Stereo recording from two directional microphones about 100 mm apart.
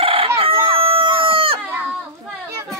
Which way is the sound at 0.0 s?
65° right (ahead or behind).